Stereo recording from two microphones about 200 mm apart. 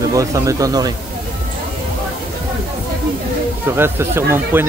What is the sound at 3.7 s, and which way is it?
Speech, 10° right (ahead or behind).